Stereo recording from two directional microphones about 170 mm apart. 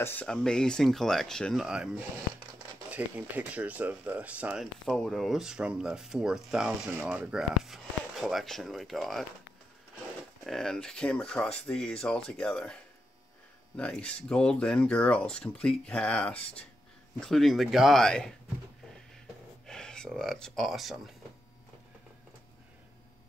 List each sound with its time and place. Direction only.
0.0 s speech: 10° left (ahead or behind)
10.4 s speech: centre (ahead or behind)
13.7 s speech: 5° left (ahead or behind)
19.6 s speech: 5° left (ahead or behind)